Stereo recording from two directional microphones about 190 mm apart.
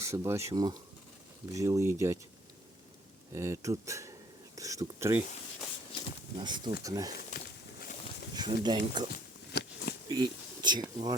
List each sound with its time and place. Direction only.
0.0 s speech: 15° right (ahead or behind)
3.3 s speech: 15° right (ahead or behind)
6.4 s speech: 25° right (ahead or behind)
7.3 s a sound: 40° left (ahead or behind)
8.4 s speech: 20° right (ahead or behind)
9.1 s a sound: 55° left (ahead or behind)
10.1 s speech: 20° right (ahead or behind)